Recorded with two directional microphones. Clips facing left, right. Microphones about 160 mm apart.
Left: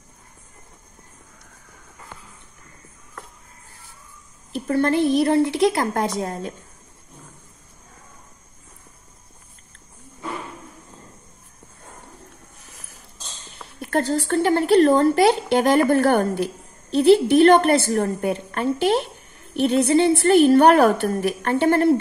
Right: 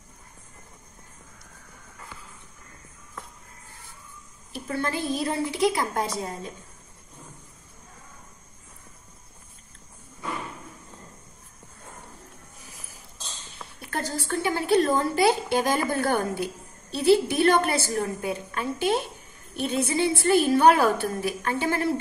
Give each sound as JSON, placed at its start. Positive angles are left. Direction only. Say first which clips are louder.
{"t": 4.6, "sound": "a woman's voice", "louder": "left 9 dB", "side_deg": 55}
{"t": 12.5, "sound": "a sound", "louder": "even", "side_deg": 0}
{"t": 13.8, "sound": "a woman's voice", "louder": "left 9 dB", "side_deg": 70}